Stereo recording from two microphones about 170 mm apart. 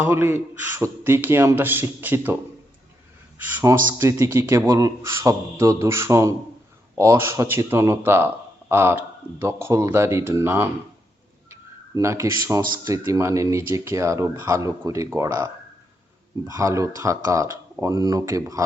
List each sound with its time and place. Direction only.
0.0 s speech: 15° right (ahead or behind)
11.9 s speech: 15° right (ahead or behind)